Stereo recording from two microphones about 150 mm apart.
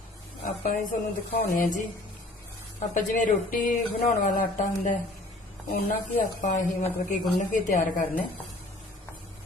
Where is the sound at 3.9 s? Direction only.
50° left (ahead or behind).